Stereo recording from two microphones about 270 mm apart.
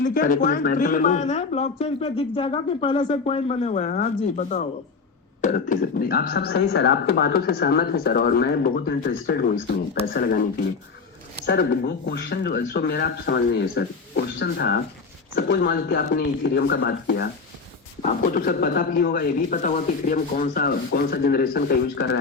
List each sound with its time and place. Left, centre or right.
0.0 s speech: left
11.4 s speech: left